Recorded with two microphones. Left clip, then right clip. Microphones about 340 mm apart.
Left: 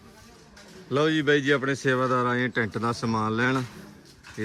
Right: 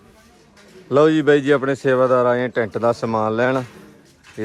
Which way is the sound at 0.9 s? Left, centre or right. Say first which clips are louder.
Right 8 dB; centre.